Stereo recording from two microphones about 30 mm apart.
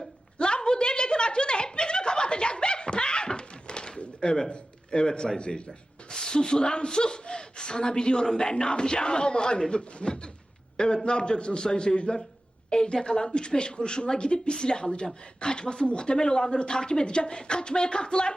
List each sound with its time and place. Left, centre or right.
0.3 s a sound: left
4.5 s speech: left
5.5 s rub: left
6.1 s a man's voice: left